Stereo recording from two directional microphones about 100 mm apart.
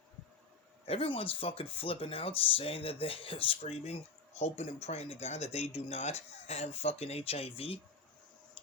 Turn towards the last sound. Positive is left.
turn(degrees=70)  # may be behind; listen again after turning